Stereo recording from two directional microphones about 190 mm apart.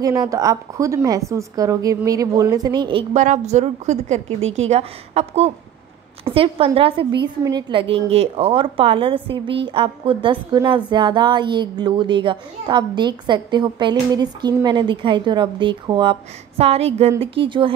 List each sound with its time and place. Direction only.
0.0 s a woman's voice: 20° right (ahead or behind); by 4.2 s 35° right (ahead or behind)
4.4 s a woman's voice: 90° right
4.6 s a woman's voice: 35° right (ahead or behind)